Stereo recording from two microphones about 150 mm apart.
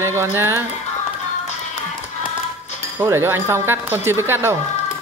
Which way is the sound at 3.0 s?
15° right (ahead or behind).